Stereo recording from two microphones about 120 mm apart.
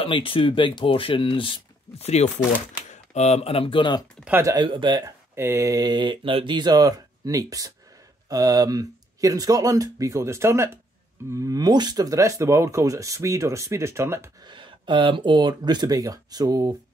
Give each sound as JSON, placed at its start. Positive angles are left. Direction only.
{"t": 0.0, "sound": "speech", "side_deg": 50}
{"t": 2.0, "sound": "speech", "side_deg": 65}
{"t": 4.2, "sound": "speech", "side_deg": -15}
{"t": 4.5, "sound": "speech", "side_deg": -40}
{"t": 5.0, "sound": "speech", "side_deg": -20}
{"t": 14.4, "sound": "speech", "side_deg": -40}